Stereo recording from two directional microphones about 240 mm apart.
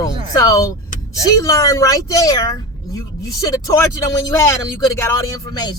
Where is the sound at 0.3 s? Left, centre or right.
Centre.